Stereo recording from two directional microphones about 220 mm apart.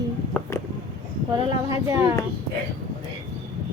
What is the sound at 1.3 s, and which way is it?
Speech, 15° right (ahead or behind).